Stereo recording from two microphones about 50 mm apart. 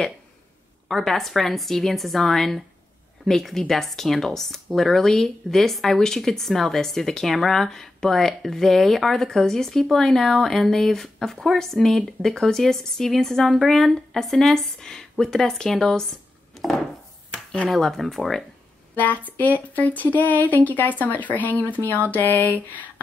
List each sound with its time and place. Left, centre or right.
0.8 s a woman's voice: centre
18.9 s speech: left